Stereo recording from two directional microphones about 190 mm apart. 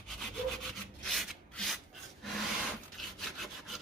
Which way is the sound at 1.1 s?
Centre (ahead or behind).